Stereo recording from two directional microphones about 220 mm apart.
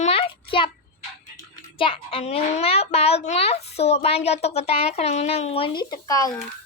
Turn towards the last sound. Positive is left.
turn(degrees=15)  # may be behind; listen again after turning